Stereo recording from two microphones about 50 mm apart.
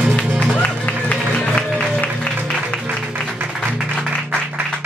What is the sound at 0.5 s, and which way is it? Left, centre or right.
Music, left.